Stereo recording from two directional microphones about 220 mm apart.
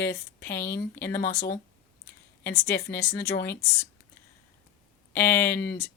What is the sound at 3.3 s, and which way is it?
Speech, 45° left (ahead or behind).